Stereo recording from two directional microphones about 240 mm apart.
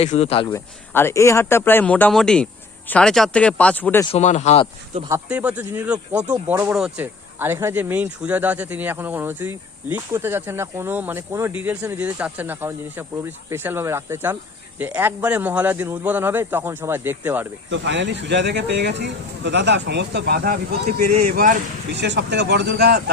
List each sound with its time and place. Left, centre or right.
0.0 s speech: left
0.4 s speech: centre
4.1 s speech: left
4.9 s speech: centre
17.7 s speech: right
22.0 s speech: right